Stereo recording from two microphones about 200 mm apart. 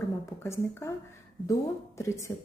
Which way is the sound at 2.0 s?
15° left (ahead or behind).